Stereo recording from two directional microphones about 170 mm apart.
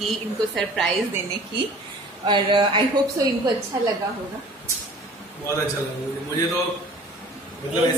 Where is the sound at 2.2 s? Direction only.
25° right (ahead or behind).